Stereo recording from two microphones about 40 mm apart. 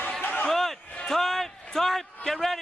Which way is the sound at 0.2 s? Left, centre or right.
Left.